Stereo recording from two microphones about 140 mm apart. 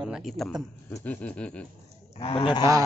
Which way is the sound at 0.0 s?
Centre (ahead or behind).